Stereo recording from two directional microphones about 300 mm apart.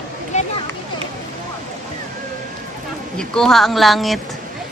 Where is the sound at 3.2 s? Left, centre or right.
Centre.